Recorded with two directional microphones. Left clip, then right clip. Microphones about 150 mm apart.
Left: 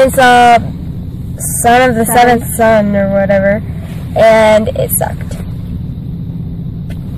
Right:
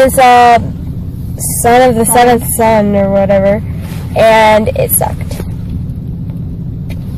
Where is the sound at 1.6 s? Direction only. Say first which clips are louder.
Right 1 dB; 5° left (ahead or behind).